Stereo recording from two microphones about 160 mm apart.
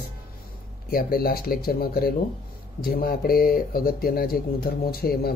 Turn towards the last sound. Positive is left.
turn(degrees=75)  # may be behind; listen again after turning